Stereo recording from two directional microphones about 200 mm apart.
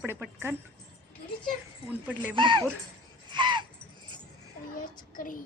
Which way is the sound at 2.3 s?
25° right (ahead or behind).